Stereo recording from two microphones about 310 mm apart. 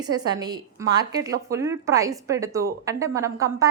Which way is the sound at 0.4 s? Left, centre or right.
Centre.